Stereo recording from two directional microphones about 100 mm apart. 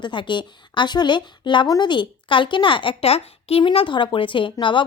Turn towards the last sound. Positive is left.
turn(degrees=55)  # may be behind; listen again after turning